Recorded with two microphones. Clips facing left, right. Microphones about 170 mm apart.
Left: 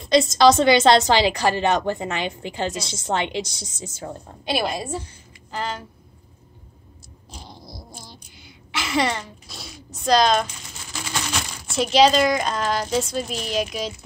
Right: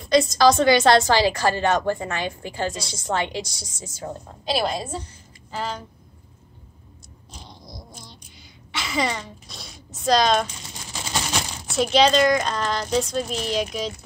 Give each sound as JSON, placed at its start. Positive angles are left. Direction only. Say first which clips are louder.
{"t": 0.0, "sound": "a woman's voice", "louder": "left 1 dB", "side_deg": 25}
{"t": 4.6, "sound": "a woman's voice", "louder": "even", "side_deg": 0}
{"t": 7.3, "sound": "a sound", "louder": "left 2 dB", "side_deg": 5}
{"t": 11.0, "sound": "coin", "louder": "right 1 dB", "side_deg": -20}
{"t": 11.7, "sound": "speech", "louder": "left 1 dB", "side_deg": 0}